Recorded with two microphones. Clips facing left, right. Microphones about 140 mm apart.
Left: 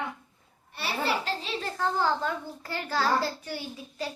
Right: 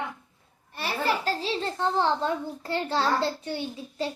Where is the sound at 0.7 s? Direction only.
45° right (ahead or behind).